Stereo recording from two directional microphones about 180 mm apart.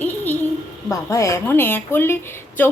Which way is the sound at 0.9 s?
15° left (ahead or behind).